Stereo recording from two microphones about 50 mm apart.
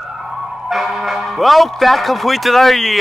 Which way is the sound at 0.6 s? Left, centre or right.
Centre.